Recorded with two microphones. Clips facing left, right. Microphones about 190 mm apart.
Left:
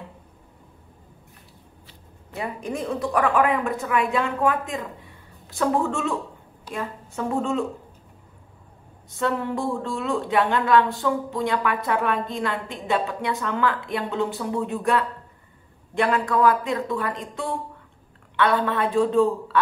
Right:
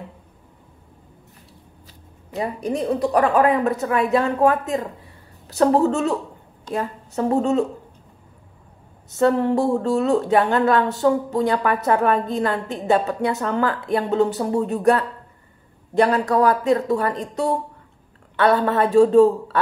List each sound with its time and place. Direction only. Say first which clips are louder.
1.9 s speech: right 6 dB; 35° right (ahead or behind)
9.1 s a woman's voice: right 8 dB; 40° right (ahead or behind)